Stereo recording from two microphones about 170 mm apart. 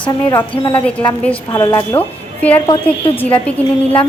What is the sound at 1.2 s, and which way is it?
Speech, 10° left (ahead or behind).